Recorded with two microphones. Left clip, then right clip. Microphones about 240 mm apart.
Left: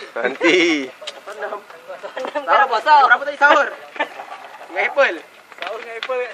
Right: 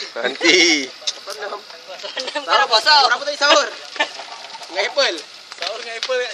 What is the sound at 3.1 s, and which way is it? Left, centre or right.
Speech, left.